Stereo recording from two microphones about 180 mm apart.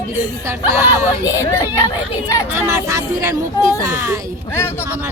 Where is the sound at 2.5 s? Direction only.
15° right (ahead or behind).